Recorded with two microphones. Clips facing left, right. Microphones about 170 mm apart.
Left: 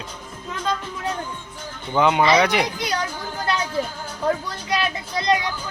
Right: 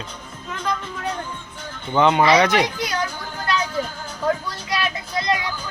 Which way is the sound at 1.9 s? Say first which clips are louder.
Right 1 dB; 5° left (ahead or behind).